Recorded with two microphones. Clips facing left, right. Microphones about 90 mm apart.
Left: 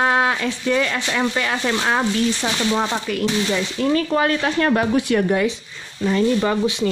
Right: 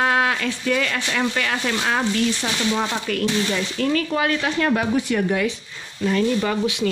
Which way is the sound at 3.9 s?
35° left (ahead or behind).